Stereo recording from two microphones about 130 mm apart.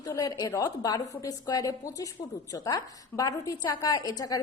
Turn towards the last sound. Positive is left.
turn(degrees=30)  # may be behind; listen again after turning